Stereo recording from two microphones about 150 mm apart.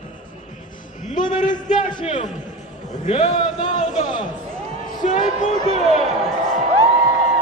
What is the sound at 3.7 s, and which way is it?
Speech, 55° left (ahead or behind).